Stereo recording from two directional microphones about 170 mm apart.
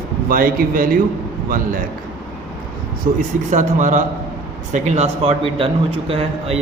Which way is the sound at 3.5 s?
50° right (ahead or behind).